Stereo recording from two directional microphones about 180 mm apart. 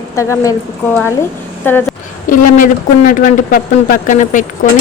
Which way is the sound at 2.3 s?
45° left (ahead or behind).